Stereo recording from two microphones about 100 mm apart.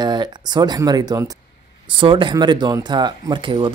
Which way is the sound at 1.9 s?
55° right (ahead or behind).